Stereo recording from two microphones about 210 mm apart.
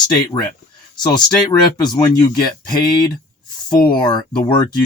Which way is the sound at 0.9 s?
20° left (ahead or behind).